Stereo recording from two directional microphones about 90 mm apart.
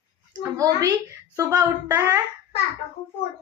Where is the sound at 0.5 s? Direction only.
40° right (ahead or behind).